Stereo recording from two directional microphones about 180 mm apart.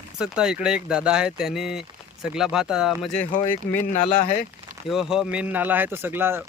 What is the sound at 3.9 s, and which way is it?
Speech, 40° left (ahead or behind).